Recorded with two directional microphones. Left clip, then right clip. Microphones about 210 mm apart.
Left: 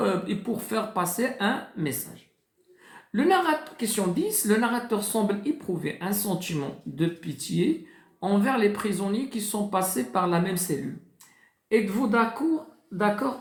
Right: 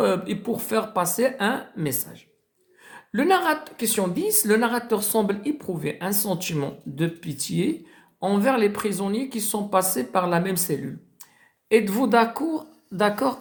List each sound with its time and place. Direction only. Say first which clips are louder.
0.0 s a woman's voice: right 4 dB; 35° right (ahead or behind)
11.7 s a woman's voice: right 5 dB; 45° right (ahead or behind)